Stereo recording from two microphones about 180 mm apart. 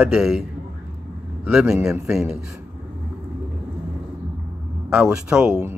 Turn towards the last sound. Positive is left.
turn(degrees=-5)  # may be behind; listen again after turning